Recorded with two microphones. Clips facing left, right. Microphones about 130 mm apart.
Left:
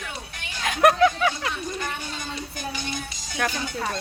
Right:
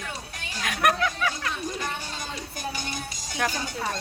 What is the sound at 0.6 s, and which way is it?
Speech, 25° left (ahead or behind).